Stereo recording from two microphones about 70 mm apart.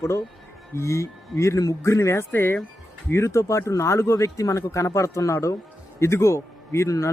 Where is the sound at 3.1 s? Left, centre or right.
Left.